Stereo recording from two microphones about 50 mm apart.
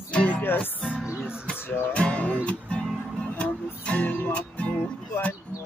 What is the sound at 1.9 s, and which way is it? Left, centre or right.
Music, left.